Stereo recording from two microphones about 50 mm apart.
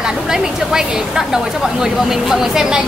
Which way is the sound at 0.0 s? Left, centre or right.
Centre.